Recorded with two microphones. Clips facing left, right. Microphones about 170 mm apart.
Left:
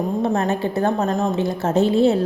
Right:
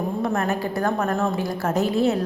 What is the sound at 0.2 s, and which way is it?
A woman's voice, 25° left (ahead or behind).